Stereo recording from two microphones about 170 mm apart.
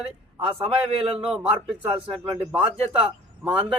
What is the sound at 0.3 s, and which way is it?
Speech, 30° right (ahead or behind).